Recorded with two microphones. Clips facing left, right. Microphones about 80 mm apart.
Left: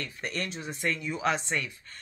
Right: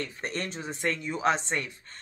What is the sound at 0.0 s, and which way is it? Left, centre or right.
Speech, right.